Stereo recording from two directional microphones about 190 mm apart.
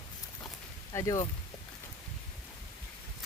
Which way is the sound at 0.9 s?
20° left (ahead or behind).